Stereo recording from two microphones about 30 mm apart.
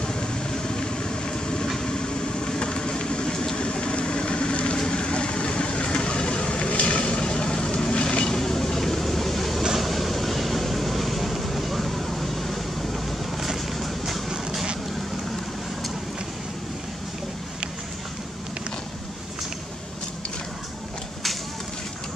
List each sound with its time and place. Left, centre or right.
0.0 s vehicle: left
8.4 s vehicle: centre